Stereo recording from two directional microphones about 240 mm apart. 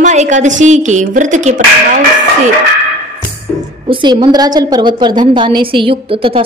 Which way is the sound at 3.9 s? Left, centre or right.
Centre.